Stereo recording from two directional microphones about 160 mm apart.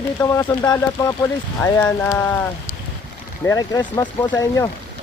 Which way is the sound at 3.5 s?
20° left (ahead or behind).